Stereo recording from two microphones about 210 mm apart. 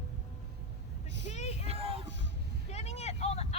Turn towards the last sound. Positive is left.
turn(degrees=30)  # may be behind; listen again after turning